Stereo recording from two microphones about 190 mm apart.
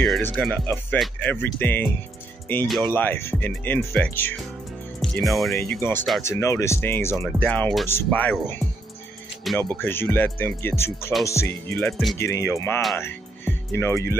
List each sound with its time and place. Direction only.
0.0 s speech: centre (ahead or behind)
5.7 s speech: 10° left (ahead or behind)
9.8 s speech: 10° left (ahead or behind)
12.9 s music: 10° left (ahead or behind)